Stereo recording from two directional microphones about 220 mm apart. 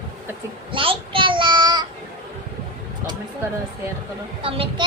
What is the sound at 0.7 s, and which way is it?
Child singing, 25° right (ahead or behind).